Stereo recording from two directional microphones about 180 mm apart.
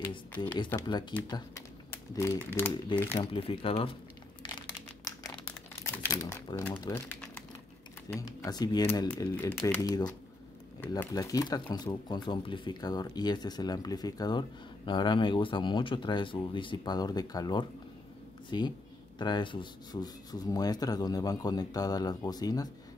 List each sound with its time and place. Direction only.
0.7 s rub: 20° left (ahead or behind)
2.1 s speech: 15° left (ahead or behind)
3.3 s speech: 30° left (ahead or behind)
4.4 s crumpling: 25° left (ahead or behind)
6.0 s speech: 15° left (ahead or behind)
8.1 s rub: 15° left (ahead or behind)